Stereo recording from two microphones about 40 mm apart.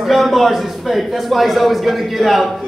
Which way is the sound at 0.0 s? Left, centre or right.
Centre.